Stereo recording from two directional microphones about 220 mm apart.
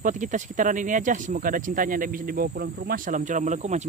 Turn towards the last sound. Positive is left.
turn(degrees=-30)  # may be behind; listen again after turning